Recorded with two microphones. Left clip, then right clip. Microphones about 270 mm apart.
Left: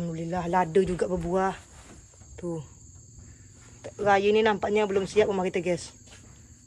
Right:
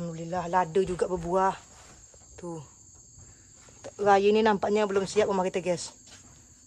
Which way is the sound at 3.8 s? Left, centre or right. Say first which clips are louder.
Right 1 dB; centre.